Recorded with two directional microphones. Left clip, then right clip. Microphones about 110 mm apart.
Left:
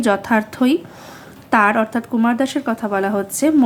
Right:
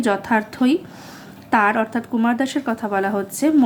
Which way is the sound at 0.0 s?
25° left (ahead or behind).